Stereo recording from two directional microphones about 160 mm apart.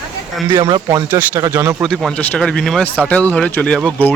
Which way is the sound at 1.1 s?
15° right (ahead or behind).